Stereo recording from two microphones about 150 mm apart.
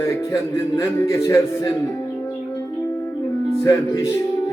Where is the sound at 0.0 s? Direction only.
20° left (ahead or behind).